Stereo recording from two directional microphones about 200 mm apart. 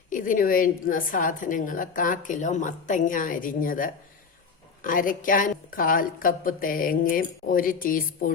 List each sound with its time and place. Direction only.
0.1 s a woman's voice: 40° left (ahead or behind)